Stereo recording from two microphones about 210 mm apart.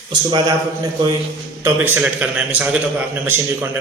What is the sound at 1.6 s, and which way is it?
A man's voice, 10° right (ahead or behind).